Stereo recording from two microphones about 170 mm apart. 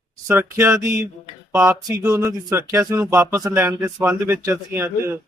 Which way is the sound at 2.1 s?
20° right (ahead or behind).